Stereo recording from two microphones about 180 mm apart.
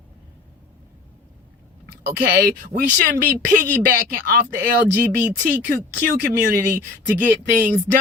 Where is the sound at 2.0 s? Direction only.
60° right (ahead or behind).